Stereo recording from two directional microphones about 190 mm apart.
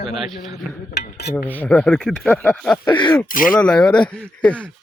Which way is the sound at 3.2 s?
45° left (ahead or behind).